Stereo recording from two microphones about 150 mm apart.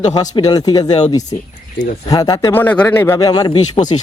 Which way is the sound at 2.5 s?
10° left (ahead or behind).